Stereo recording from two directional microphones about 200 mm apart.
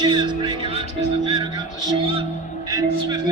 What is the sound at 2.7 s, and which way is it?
Speech, 20° right (ahead or behind).